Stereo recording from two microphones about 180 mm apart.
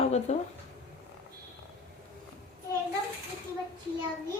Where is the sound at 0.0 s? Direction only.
35° left (ahead or behind).